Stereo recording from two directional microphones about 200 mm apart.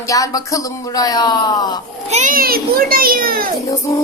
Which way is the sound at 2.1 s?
40° right (ahead or behind).